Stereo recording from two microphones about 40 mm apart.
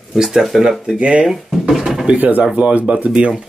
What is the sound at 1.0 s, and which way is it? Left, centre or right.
Speech, right.